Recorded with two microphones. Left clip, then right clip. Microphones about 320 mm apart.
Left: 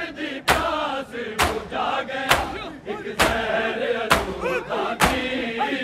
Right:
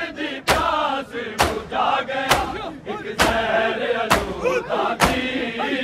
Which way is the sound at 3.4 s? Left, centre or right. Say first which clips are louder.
Right 3 dB; centre.